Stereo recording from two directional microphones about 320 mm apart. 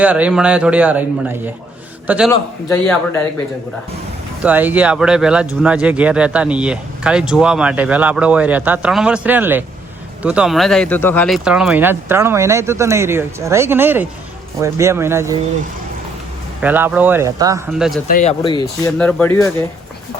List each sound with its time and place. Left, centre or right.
0.0 s speech: centre
2.3 s a man's voice: centre
4.4 s speech: centre
16.6 s speech: centre
18.1 s speech: left
18.9 s speech: centre